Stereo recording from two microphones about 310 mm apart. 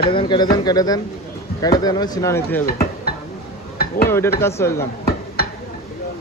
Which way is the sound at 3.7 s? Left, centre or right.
Left.